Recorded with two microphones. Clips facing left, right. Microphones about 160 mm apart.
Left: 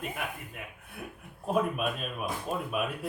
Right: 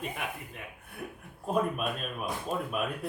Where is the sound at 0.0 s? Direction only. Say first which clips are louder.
Even; 5° left (ahead or behind).